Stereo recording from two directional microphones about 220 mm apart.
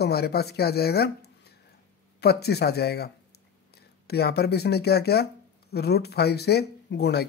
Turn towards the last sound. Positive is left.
turn(degrees=50)  # may be behind; listen again after turning